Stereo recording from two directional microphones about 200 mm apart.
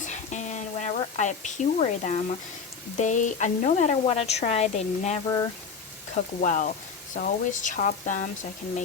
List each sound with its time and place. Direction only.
0.0 s a sound: 35° left (ahead or behind)
3.0 s a woman's voice: 40° left (ahead or behind)
6.4 s a woman's voice: 40° left (ahead or behind)